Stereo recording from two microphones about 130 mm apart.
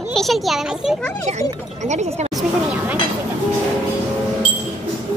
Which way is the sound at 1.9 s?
65° right (ahead or behind).